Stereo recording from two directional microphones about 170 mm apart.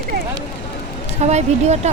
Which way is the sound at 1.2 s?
40° right (ahead or behind).